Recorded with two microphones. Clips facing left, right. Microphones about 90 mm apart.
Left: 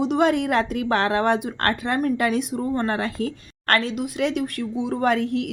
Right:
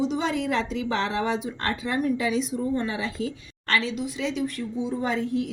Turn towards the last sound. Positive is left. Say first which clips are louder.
# left 5 dB
turn(degrees=70)  # may be behind; listen again after turning